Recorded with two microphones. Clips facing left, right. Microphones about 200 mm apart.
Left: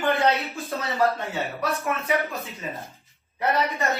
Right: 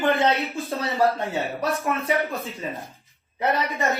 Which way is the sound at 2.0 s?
30° right (ahead or behind).